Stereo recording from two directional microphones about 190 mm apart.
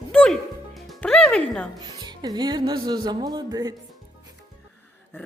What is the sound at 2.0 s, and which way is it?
Speech, 20° right (ahead or behind).